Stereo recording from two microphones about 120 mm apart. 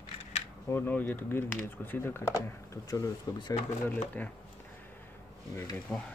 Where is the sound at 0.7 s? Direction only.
20° left (ahead or behind).